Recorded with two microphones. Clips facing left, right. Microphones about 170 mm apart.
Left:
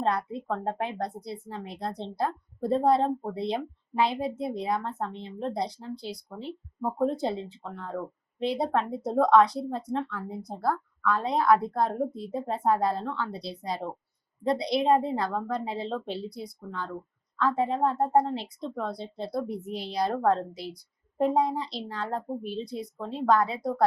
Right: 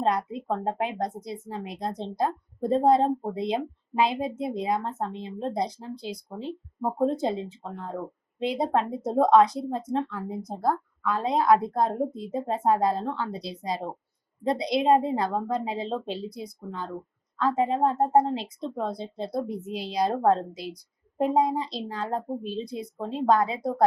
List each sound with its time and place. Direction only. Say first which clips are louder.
0.0 s a woman's voice: right 2 dB; 15° right (ahead or behind)